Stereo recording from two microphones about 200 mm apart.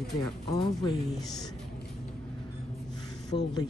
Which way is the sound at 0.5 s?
20° left (ahead or behind).